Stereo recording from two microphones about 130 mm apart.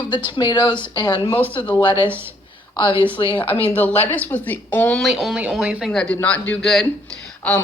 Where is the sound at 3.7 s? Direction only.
15° left (ahead or behind).